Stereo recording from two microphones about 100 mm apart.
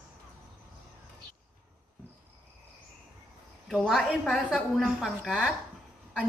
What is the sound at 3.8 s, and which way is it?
A man's voice, centre (ahead or behind).